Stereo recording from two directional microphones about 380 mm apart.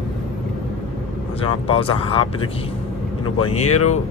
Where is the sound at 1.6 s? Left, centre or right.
Centre.